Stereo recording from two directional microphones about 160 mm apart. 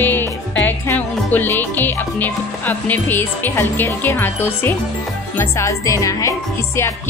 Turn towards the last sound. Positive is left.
turn(degrees=20)  # may be behind; listen again after turning